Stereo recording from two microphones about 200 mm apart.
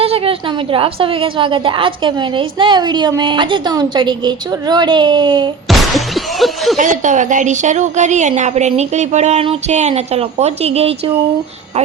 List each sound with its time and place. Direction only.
0.0 s a woman's voice: 30° right (ahead or behind)
5.6 s a sound: centre (ahead or behind)
6.7 s a woman's voice: 40° right (ahead or behind)